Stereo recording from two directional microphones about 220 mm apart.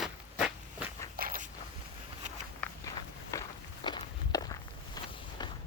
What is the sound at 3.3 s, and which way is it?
Walk, 15° left (ahead or behind).